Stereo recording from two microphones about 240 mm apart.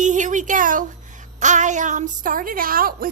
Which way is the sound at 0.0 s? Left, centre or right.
Right.